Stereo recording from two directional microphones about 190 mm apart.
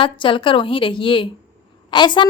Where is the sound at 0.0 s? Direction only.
25° left (ahead or behind).